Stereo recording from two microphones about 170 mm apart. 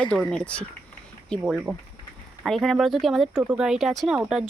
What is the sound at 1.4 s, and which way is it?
Speech, 5° right (ahead or behind).